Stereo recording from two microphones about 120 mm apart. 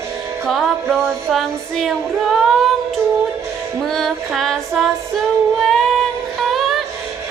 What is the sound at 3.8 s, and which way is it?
Female singing, 5° left (ahead or behind).